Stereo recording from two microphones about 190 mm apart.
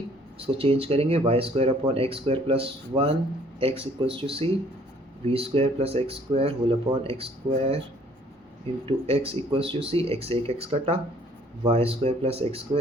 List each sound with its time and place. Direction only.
0.3 s speech: 30° right (ahead or behind)
8.9 s speech: 30° right (ahead or behind)